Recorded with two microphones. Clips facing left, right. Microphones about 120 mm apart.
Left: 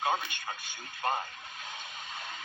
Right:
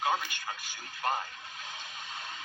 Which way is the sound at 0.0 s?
25° left (ahead or behind).